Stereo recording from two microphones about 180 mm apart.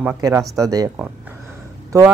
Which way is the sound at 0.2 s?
20° right (ahead or behind).